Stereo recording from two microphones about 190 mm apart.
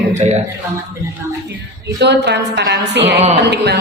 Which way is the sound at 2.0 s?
65° right (ahead or behind).